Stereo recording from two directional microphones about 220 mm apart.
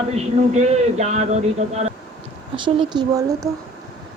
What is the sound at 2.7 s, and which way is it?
Speech, 20° right (ahead or behind).